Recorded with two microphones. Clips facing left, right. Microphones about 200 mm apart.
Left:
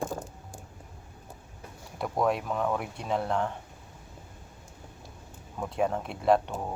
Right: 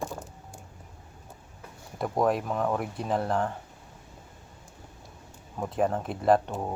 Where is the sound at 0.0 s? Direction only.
50° left (ahead or behind).